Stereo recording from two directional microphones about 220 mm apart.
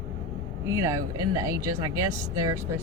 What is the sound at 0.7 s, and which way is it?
Speech, 15° right (ahead or behind).